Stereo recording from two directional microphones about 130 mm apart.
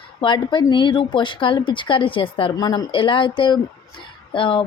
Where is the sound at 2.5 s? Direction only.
30° left (ahead or behind).